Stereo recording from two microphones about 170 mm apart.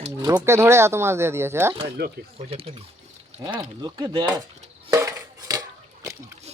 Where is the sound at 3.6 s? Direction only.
25° right (ahead or behind).